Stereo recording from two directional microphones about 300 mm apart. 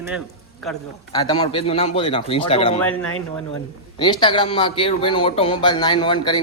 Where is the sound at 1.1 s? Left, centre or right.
Centre.